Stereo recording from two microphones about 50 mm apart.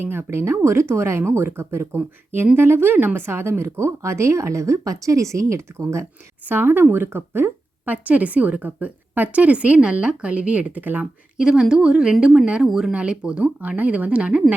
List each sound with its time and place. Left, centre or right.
0.0 s speech: right
2.8 s a woman's voice: right
3.2 s speech: right
3.6 s speech: right
5.7 s speech: right
6.4 s speech: right
7.9 s a woman's voice: right
11.3 s a woman's voice: centre
12.9 s a woman's voice: right